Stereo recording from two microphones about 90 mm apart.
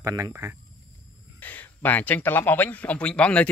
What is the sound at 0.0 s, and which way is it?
Speech, 40° right (ahead or behind).